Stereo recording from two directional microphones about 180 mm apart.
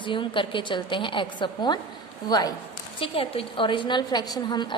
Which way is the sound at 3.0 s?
30° left (ahead or behind).